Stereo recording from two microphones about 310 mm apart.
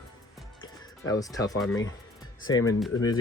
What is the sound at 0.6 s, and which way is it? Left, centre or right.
Music, centre.